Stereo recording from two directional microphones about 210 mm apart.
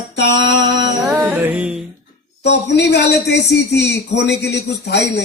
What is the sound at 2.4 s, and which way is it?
A man's voice, 55° left (ahead or behind).